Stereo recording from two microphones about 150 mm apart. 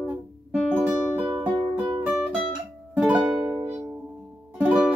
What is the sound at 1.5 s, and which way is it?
Music, 30° right (ahead or behind).